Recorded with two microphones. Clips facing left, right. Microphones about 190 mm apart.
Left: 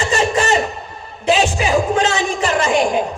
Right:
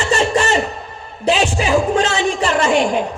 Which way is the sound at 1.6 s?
35° right (ahead or behind).